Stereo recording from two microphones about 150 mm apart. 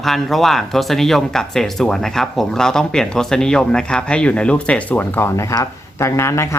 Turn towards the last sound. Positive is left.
turn(degrees=20)  # may be behind; listen again after turning